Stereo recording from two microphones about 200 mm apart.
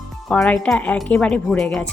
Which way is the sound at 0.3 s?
5° left (ahead or behind).